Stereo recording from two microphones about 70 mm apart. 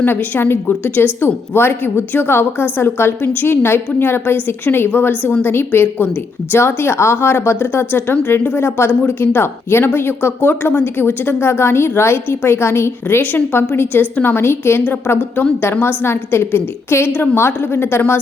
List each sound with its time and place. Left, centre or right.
0.0 s speech: left